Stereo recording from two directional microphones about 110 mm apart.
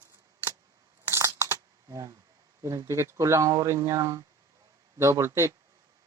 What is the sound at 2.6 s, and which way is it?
Speech, 30° right (ahead or behind).